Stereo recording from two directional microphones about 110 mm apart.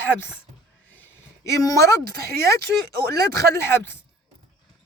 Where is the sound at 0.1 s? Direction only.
20° left (ahead or behind).